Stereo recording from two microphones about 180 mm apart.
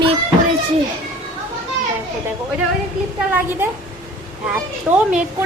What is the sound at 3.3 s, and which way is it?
A woman's voice, 10° right (ahead or behind).